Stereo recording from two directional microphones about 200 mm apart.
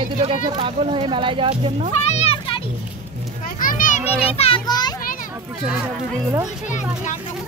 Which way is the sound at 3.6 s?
40° left (ahead or behind).